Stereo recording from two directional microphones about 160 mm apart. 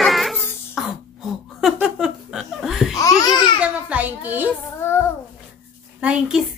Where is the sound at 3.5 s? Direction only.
10° right (ahead or behind).